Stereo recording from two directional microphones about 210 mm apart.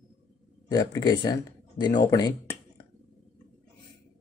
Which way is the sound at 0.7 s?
15° left (ahead or behind).